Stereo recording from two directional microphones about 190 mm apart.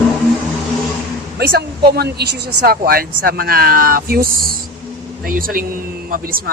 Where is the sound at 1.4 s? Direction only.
60° right (ahead or behind).